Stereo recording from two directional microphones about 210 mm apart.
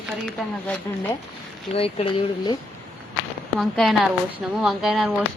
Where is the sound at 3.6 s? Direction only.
Centre (ahead or behind).